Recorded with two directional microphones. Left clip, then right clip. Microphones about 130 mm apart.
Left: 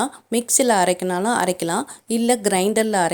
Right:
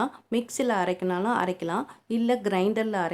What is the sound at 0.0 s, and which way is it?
A woman's voice, 35° left (ahead or behind).